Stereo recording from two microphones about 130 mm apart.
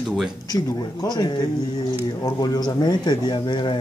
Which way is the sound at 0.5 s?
35° left (ahead or behind).